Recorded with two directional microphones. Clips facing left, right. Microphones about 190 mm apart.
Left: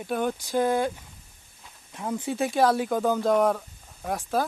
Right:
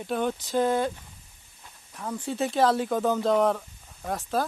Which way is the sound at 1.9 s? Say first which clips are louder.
Left 3 dB; 20° left (ahead or behind).